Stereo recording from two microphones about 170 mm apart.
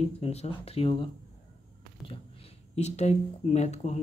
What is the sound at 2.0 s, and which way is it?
Speech, 35° left (ahead or behind).